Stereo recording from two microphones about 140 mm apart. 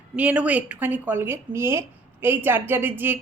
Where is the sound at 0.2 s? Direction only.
10° right (ahead or behind).